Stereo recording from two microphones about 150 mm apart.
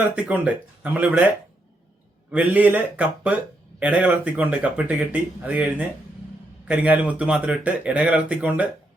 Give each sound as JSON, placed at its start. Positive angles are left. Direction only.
{"t": 0.2, "sound": "speech", "side_deg": -10}
{"t": 2.3, "sound": "speech", "side_deg": -10}